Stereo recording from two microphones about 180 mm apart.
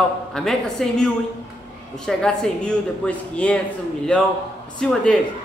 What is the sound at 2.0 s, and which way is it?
A man's voice, 5° left (ahead or behind).